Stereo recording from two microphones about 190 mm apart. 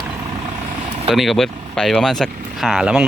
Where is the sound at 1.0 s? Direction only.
Centre (ahead or behind).